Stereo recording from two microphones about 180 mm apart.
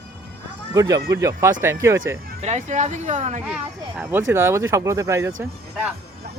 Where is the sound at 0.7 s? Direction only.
20° right (ahead or behind).